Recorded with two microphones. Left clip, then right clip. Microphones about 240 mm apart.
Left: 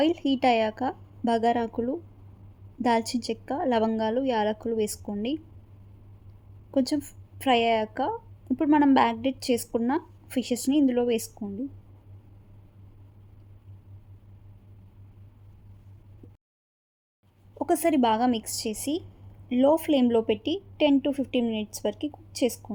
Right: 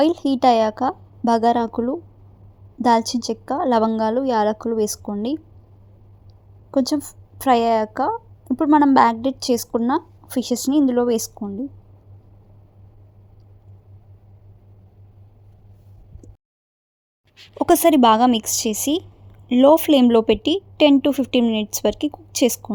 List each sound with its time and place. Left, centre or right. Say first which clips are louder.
0.0 s a woman's voice: right 7 dB; right
6.7 s a woman's voice: right 6 dB; right
17.6 s a woman's voice: right 9 dB; right